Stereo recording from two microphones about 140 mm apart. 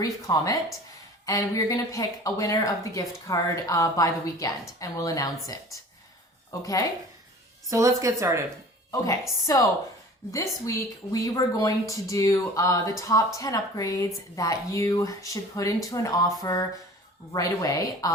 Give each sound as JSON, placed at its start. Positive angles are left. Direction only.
{"t": 0.0, "sound": "speech", "side_deg": 25}
{"t": 6.5, "sound": "speech", "side_deg": 25}
{"t": 7.7, "sound": "speech", "side_deg": -25}
{"t": 10.3, "sound": "speech", "side_deg": 25}